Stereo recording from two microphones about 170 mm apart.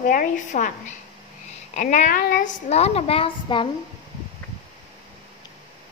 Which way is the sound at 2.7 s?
35° left (ahead or behind).